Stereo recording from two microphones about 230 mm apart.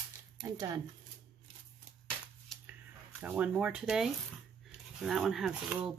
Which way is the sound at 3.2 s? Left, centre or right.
Centre.